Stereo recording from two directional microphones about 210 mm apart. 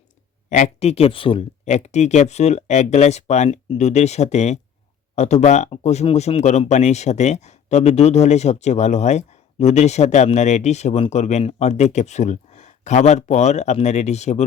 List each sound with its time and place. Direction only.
0.5 s speech: 30° left (ahead or behind)